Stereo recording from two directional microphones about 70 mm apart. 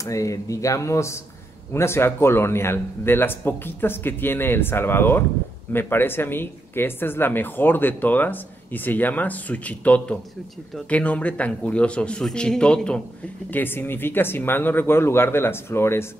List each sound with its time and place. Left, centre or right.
0.0 s speech: left; by 13.0 s centre
13.5 s speech: left